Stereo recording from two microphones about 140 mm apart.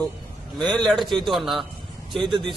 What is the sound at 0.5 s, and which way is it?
A man's voice, 5° left (ahead or behind).